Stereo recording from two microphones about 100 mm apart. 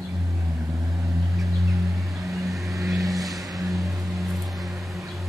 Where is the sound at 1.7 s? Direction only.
30° right (ahead or behind).